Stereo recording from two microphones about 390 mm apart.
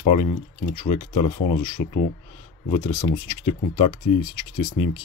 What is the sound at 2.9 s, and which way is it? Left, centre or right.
Speech, centre.